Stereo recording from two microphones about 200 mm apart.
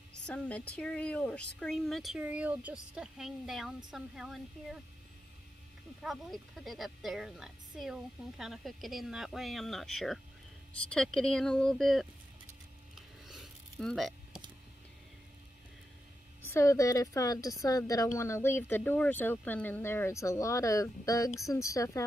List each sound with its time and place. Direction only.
0.1 s a woman's voice: 5° left (ahead or behind)
6.0 s a woman's voice: centre (ahead or behind)
13.3 s a sound: centre (ahead or behind)
16.4 s a woman's voice: 15° left (ahead or behind)